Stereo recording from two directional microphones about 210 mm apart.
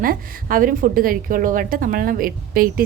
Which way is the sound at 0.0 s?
40° right (ahead or behind).